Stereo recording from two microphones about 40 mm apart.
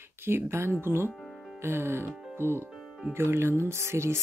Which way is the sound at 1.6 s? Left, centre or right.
Right.